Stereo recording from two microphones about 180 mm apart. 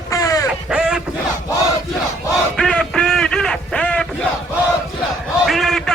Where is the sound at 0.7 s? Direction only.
5° right (ahead or behind).